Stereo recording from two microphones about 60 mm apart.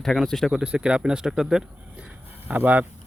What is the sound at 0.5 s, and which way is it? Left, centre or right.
Speech, centre.